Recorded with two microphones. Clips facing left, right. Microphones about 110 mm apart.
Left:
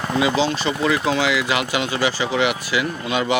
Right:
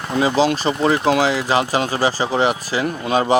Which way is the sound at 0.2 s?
35° right (ahead or behind).